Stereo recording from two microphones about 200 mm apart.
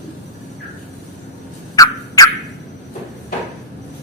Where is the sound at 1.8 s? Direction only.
15° left (ahead or behind).